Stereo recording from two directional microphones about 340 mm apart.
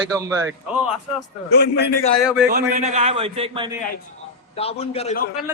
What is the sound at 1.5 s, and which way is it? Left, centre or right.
Speech, left.